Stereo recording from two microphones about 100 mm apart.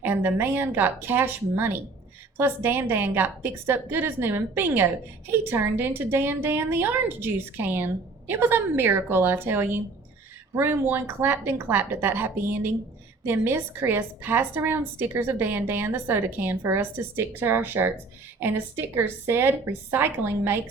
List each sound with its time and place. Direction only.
0.0 s a woman's voice: 20° right (ahead or behind)